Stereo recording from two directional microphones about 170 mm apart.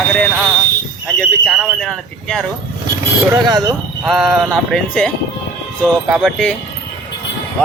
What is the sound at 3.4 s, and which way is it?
Speech, 25° right (ahead or behind).